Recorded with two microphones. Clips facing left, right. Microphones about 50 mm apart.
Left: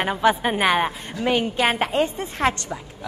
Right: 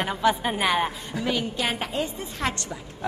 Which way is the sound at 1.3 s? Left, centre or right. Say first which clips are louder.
Left 7 dB; left.